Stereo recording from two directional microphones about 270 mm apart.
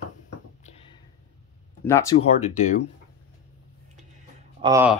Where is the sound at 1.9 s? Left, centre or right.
Centre.